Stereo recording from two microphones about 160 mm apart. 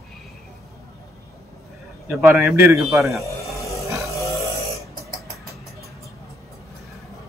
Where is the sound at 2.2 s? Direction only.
20° right (ahead or behind).